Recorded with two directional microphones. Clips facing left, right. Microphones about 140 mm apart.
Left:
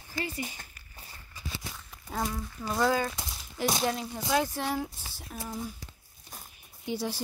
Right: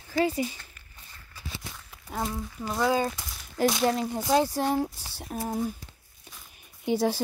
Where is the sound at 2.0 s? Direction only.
5° right (ahead or behind).